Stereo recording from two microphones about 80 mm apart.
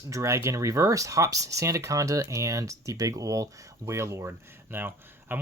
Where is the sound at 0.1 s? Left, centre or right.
Right.